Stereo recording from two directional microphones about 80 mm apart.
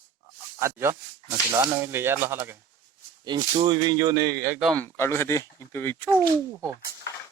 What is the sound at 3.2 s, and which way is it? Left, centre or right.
Speech, right.